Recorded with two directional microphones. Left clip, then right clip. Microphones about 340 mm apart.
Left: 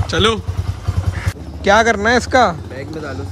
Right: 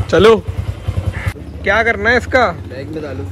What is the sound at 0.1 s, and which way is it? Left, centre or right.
Speech, centre.